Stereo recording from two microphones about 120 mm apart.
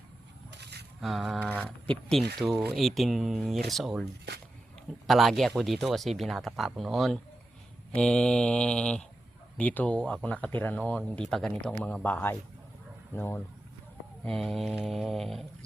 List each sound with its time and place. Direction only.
1.0 s speech: centre (ahead or behind)
1.5 s speech: 10° left (ahead or behind)
5.0 s speech: centre (ahead or behind); by 13.4 s 20° left (ahead or behind)
14.3 s speech: 5° left (ahead or behind)